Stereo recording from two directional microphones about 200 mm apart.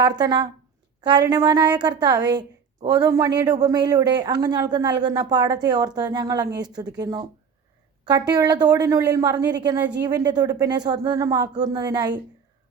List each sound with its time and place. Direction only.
0.0 s a woman's voice: 20° right (ahead or behind)